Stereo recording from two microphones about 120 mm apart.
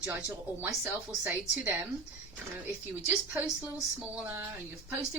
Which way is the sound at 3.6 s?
15° right (ahead or behind).